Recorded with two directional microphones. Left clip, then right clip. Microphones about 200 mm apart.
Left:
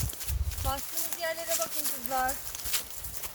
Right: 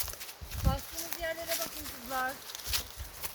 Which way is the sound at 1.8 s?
45° left (ahead or behind).